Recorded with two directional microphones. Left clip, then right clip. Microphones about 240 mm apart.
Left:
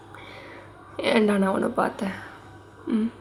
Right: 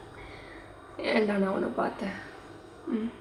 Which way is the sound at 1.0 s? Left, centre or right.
Left.